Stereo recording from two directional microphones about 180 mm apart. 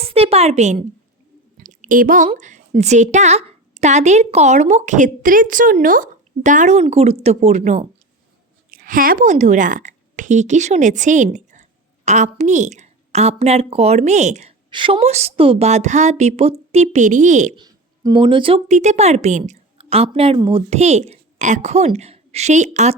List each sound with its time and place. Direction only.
0.0 s a woman's voice: 35° right (ahead or behind)
1.5 s a sound: 45° right (ahead or behind)
2.4 s a woman's voice: 40° right (ahead or behind)
8.7 s a woman's voice: 50° right (ahead or behind)
14.7 s a woman's voice: 30° right (ahead or behind)
17.6 s speech: 25° right (ahead or behind)
18.7 s a woman's voice: 40° right (ahead or behind)